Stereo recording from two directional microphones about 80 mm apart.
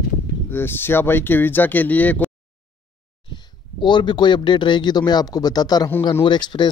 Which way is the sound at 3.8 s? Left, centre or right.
Left.